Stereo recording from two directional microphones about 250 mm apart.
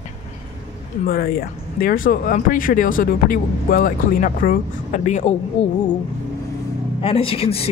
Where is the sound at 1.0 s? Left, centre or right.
Left.